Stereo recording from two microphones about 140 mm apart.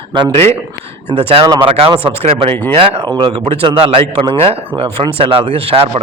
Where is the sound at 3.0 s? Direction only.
35° right (ahead or behind).